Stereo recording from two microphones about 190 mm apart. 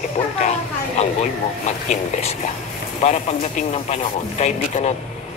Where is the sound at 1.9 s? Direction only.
35° left (ahead or behind).